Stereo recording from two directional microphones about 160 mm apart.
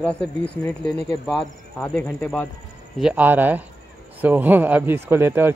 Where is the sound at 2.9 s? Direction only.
5° right (ahead or behind).